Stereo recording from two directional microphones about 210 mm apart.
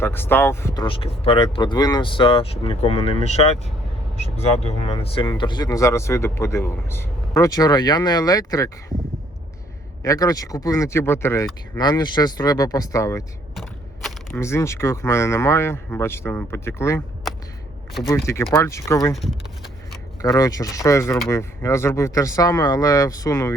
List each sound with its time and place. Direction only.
0.0 s speech: 10° left (ahead or behind); by 3.5 s 30° left (ahead or behind)
4.8 s speech: 30° left (ahead or behind)
10.0 s speech: 15° left (ahead or behind)
14.3 s speech: 15° left (ahead or behind)
18.5 s speech: 15° left (ahead or behind)
19.1 s speech: centre (ahead or behind)
20.2 s speech: 15° left (ahead or behind)